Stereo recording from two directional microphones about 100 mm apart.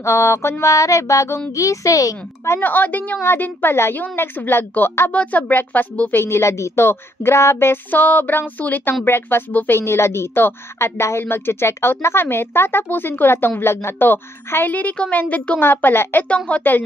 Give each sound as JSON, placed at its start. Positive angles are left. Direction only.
{"t": 0.0, "sound": "a sound", "side_deg": 30}
{"t": 1.5, "sound": "speech", "side_deg": 35}
{"t": 6.2, "sound": "a woman's voice", "side_deg": 25}